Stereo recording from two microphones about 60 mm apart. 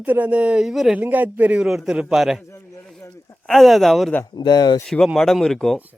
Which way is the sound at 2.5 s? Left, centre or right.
Left.